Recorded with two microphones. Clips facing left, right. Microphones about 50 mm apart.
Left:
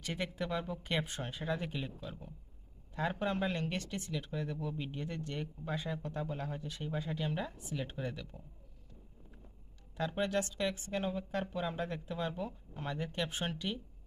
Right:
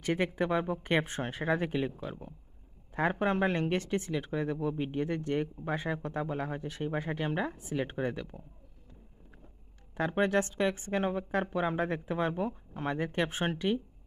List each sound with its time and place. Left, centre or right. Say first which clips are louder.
0.0 s speech: right 8 dB; right
9.9 s speech: right 6 dB; right